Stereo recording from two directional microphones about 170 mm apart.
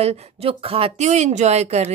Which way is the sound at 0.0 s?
35° right (ahead or behind).